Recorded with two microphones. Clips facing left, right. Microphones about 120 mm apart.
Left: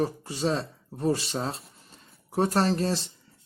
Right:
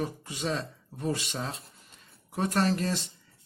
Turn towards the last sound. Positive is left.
turn(degrees=35)  # may be behind; listen again after turning